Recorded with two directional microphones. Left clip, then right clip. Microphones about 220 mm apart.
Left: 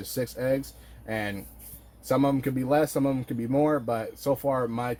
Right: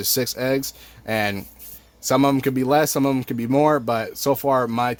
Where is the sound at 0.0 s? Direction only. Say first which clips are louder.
Right 7 dB; 55° right (ahead or behind).